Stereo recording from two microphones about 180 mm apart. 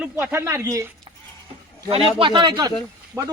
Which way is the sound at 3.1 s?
5° right (ahead or behind).